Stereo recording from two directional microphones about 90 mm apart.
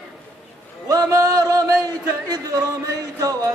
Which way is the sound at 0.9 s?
40° right (ahead or behind).